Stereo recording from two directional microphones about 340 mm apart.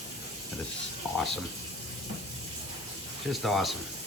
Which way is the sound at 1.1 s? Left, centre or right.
Centre.